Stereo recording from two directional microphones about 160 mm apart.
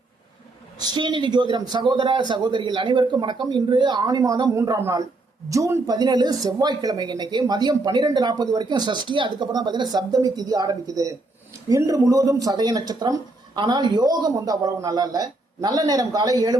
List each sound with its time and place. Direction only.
0.8 s a man's voice: 30° right (ahead or behind)